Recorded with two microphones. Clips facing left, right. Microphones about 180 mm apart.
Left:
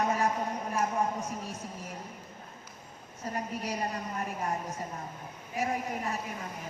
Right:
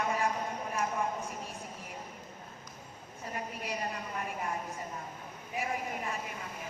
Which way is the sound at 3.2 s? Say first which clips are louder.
Left 4 dB; 40° left (ahead or behind).